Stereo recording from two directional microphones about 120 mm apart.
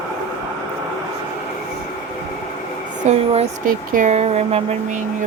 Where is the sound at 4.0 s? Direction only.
70° right (ahead or behind).